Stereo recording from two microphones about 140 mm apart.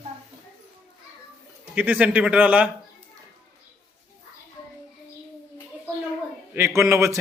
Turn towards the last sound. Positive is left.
turn(degrees=-20)  # may be behind; listen again after turning